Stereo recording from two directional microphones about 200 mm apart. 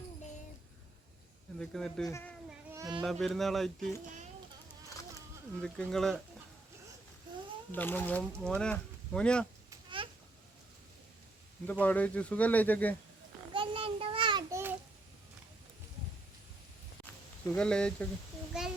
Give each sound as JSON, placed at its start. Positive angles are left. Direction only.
{"t": 1.5, "sound": "speech", "side_deg": 5}
{"t": 2.0, "sound": "speech", "side_deg": 15}
{"t": 2.7, "sound": "speech", "side_deg": -20}
{"t": 3.0, "sound": "speech", "side_deg": 0}
{"t": 5.6, "sound": "speech", "side_deg": 5}
{"t": 7.7, "sound": "speech", "side_deg": 10}
{"t": 9.6, "sound": "babbling", "side_deg": -25}
{"t": 11.6, "sound": "speech", "side_deg": 10}
{"t": 13.5, "sound": "a sound", "side_deg": -25}
{"t": 17.4, "sound": "speech", "side_deg": 5}